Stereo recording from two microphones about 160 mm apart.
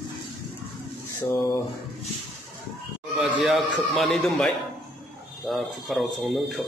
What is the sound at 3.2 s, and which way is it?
A man's voice, centre (ahead or behind).